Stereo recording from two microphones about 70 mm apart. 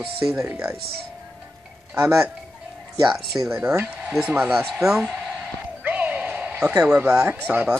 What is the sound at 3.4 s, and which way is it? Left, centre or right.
Speech, right.